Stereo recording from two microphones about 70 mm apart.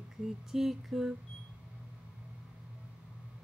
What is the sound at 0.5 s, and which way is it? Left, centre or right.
Speech, centre.